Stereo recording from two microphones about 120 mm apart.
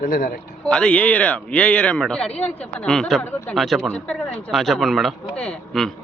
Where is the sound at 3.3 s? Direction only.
20° left (ahead or behind).